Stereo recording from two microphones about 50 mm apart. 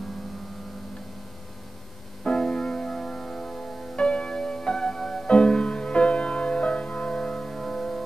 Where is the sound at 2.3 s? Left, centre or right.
Centre.